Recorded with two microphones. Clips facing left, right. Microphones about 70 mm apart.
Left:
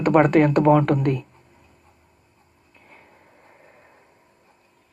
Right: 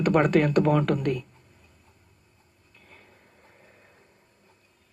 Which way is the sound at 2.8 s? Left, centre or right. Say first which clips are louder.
Left 4 dB; left.